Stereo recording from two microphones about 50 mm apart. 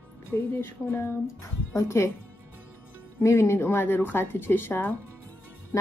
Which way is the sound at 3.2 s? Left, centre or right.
Left.